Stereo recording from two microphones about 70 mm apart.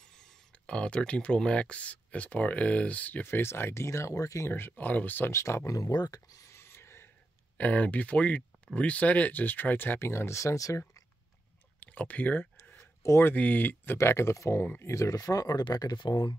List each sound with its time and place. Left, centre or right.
0.0 s speech: centre; by 4.5 s left
4.5 s speech: left
5.3 s speech: left
5.8 s a sound: left
7.5 s speech: left
9.9 s speech: left
11.8 s speech: left
13.0 s speech: left
13.3 s speech: left
13.9 s speech: left